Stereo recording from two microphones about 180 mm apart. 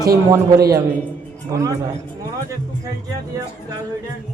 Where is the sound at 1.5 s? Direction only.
20° right (ahead or behind).